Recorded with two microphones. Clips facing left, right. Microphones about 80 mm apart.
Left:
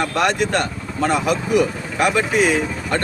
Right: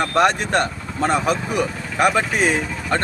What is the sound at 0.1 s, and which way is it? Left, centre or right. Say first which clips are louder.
A man's voice: right 1 dB; right.